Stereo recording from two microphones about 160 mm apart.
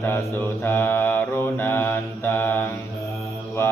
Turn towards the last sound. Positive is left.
turn(degrees=15)  # may be behind; listen again after turning